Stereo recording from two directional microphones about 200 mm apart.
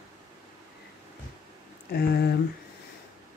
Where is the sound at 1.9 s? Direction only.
55° left (ahead or behind).